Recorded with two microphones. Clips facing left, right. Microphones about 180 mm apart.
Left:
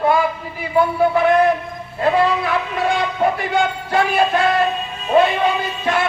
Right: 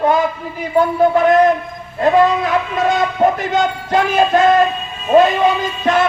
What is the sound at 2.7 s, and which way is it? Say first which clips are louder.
Speech: right 3 dB; 40° right (ahead or behind).